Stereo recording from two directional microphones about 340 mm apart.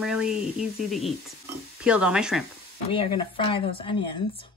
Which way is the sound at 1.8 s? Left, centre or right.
Centre.